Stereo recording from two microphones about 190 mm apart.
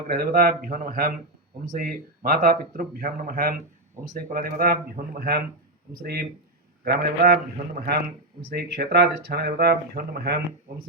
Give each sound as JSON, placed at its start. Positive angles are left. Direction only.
{"t": 0.1, "sound": "speech", "side_deg": -45}
{"t": 8.4, "sound": "speech", "side_deg": -55}